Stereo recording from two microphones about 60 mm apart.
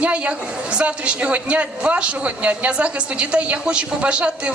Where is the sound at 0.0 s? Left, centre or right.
Right.